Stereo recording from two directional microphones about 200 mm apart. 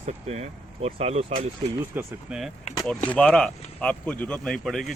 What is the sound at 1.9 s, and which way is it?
Speech, 5° right (ahead or behind).